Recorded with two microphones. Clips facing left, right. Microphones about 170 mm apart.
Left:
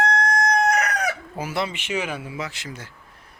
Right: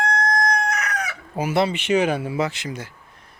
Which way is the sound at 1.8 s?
35° right (ahead or behind).